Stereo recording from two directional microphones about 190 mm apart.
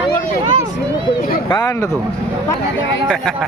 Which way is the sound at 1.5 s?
20° left (ahead or behind).